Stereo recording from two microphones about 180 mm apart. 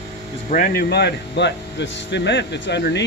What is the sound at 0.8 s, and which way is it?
Speech, 70° left (ahead or behind).